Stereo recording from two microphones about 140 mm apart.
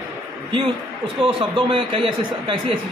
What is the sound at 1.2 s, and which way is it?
A man's voice, 40° right (ahead or behind).